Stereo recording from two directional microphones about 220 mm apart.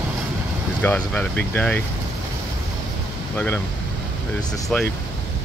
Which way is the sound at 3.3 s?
10° left (ahead or behind).